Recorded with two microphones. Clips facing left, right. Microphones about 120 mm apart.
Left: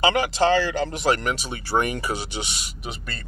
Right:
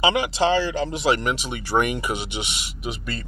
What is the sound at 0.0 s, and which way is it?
Speech, 45° left (ahead or behind).